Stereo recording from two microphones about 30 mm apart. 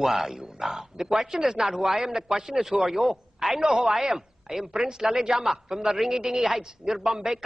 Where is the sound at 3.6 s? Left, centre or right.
Centre.